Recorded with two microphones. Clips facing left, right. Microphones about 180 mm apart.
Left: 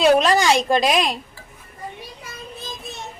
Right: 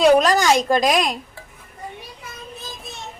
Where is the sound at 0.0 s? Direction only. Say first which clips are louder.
Right 1 dB; centre (ahead or behind).